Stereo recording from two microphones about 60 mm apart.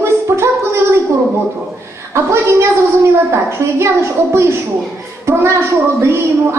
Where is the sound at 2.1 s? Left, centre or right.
Right.